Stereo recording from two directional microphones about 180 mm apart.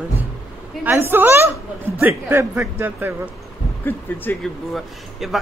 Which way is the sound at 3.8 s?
10° left (ahead or behind).